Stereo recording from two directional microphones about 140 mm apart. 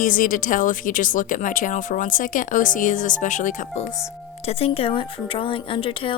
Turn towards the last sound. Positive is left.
turn(degrees=40)  # may be behind; listen again after turning